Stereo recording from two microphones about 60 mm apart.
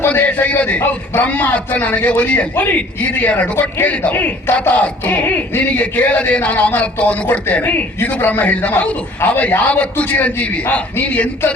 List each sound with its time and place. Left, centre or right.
0.1 s a man's voice: left
4.1 s speech: left
4.7 s a man's voice: left
7.6 s a man's voice: left